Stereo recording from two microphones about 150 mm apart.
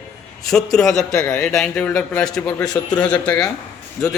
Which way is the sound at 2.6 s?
25° left (ahead or behind).